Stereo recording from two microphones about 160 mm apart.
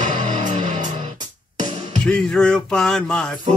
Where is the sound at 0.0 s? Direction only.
50° right (ahead or behind).